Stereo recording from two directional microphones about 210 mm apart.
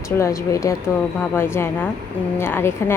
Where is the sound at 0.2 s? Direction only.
15° left (ahead or behind).